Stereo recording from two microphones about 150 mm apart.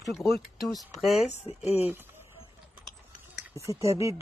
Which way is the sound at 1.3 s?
45° left (ahead or behind).